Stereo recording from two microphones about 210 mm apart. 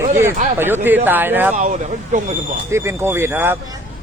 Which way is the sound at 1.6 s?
35° right (ahead or behind).